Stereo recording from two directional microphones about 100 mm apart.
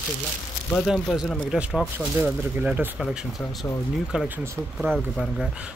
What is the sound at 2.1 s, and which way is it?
Speech, 15° right (ahead or behind).